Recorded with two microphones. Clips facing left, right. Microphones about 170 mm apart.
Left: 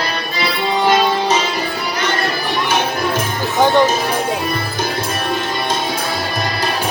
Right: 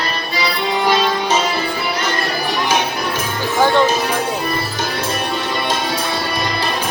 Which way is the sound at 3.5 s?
15° left (ahead or behind).